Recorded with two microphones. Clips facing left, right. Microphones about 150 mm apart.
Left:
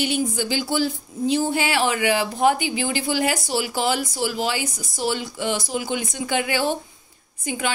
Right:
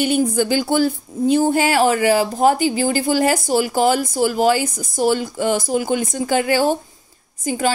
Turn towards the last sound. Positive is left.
turn(degrees=-40)  # may be behind; listen again after turning